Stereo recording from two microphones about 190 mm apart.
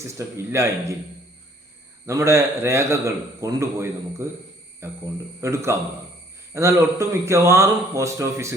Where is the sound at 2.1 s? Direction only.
15° right (ahead or behind).